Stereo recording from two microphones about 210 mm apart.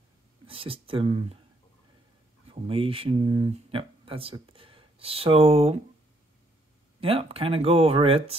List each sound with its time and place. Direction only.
0.5 s speech: 25° right (ahead or behind)
2.5 s speech: 25° right (ahead or behind)
7.0 s speech: 25° right (ahead or behind)